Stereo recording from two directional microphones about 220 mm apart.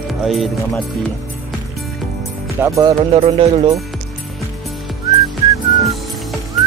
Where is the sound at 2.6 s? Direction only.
15° right (ahead or behind).